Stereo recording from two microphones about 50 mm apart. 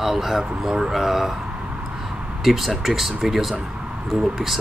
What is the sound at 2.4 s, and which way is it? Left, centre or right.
Speech, centre.